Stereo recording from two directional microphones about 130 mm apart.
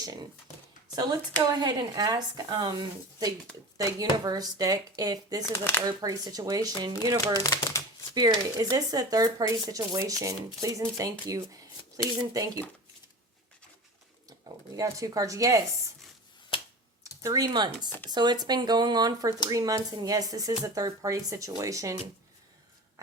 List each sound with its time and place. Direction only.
1.6 s speech: 30° right (ahead or behind)
5.5 s speech: 15° left (ahead or behind)
5.8 s speech: 30° right (ahead or behind)
7.3 s speech: 30° left (ahead or behind)
8.1 s speech: 30° right (ahead or behind)
14.4 s speech: 25° right (ahead or behind)
16.5 s computer keyboard: 45° left (ahead or behind)
17.2 s speech: 30° right (ahead or behind)